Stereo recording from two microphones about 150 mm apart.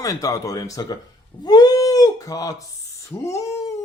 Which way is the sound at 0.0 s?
20° left (ahead or behind).